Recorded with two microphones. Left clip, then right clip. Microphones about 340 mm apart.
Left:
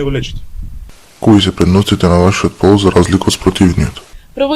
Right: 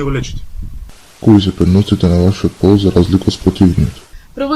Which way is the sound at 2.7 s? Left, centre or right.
Left.